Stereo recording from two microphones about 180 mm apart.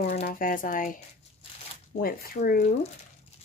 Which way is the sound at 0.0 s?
40° left (ahead or behind).